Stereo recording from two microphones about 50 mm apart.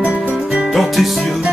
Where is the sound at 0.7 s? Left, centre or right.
Centre.